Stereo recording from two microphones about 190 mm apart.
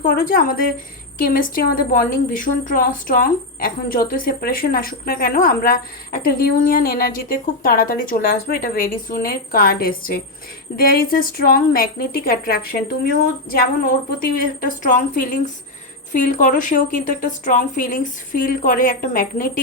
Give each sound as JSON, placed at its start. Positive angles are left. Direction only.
{"t": 0.1, "sound": "a woman's voice", "side_deg": 50}